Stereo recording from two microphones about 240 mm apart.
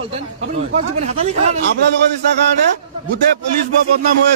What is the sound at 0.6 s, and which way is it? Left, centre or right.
A man's voice, right.